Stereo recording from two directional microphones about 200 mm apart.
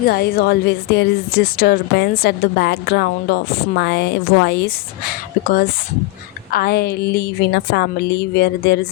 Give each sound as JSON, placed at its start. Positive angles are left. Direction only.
{"t": 0.1, "sound": "a woman's voice", "side_deg": 50}